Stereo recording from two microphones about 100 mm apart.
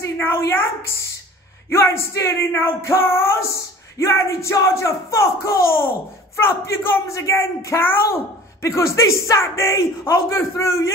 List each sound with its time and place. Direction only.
0.0 s a woman's voice: 25° left (ahead or behind)